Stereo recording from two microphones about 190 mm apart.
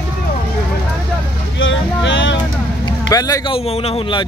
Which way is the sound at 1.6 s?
75° left (ahead or behind).